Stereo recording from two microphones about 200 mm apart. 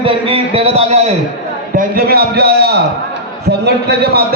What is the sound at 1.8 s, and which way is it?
A man's voice, 50° right (ahead or behind).